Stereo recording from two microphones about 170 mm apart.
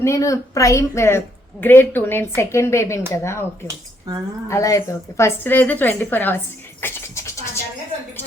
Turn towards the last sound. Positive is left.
turn(degrees=15)  # may be behind; listen again after turning